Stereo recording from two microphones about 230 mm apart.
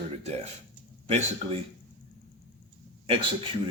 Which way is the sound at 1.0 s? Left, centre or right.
Right.